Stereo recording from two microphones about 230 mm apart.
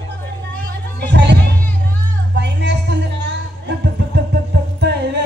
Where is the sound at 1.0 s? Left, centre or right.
Right.